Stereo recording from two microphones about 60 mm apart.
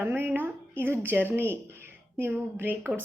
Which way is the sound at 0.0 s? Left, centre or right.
Right.